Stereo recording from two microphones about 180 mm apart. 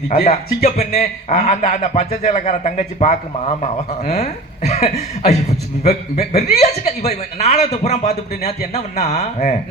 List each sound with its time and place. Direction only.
0.3 s speech: 35° left (ahead or behind)